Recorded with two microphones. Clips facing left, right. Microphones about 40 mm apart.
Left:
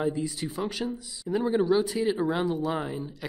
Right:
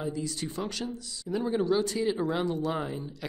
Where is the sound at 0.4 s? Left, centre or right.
Centre.